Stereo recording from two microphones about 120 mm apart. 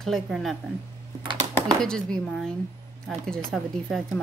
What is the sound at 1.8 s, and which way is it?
Speech, 5° left (ahead or behind).